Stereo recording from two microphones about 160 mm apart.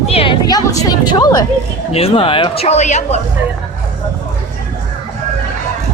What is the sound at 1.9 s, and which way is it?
Speech, 35° left (ahead or behind).